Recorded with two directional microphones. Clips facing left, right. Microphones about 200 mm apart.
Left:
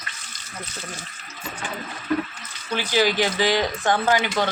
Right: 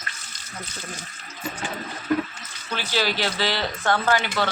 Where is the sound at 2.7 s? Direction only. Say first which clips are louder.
Left 5 dB; 15° left (ahead or behind).